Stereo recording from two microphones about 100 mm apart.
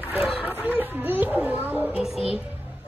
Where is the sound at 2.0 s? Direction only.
5° right (ahead or behind).